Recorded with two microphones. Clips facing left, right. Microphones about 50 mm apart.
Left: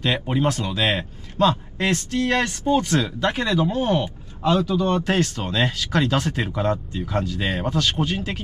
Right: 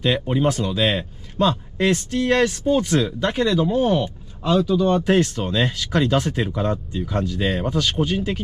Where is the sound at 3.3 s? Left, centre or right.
Centre.